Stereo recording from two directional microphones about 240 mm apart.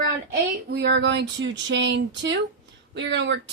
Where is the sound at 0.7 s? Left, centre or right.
Right.